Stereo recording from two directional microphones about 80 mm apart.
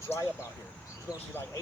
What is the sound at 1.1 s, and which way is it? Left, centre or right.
Speech, centre.